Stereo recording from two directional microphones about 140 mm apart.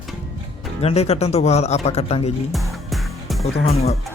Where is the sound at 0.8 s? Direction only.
45° left (ahead or behind).